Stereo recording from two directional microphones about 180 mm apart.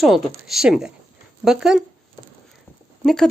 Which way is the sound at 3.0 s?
Centre (ahead or behind).